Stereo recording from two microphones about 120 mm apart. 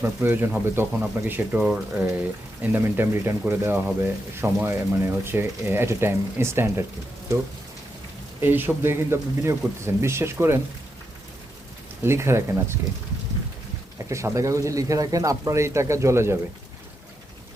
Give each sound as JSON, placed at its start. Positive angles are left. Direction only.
{"t": 0.0, "sound": "speech", "side_deg": -20}
{"t": 8.4, "sound": "speech", "side_deg": -15}
{"t": 12.0, "sound": "speech", "side_deg": -20}
{"t": 14.1, "sound": "speech", "side_deg": -25}